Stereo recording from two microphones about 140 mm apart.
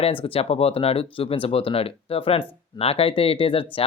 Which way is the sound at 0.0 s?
40° left (ahead or behind).